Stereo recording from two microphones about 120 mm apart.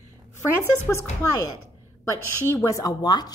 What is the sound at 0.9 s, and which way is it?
Speech, 20° left (ahead or behind).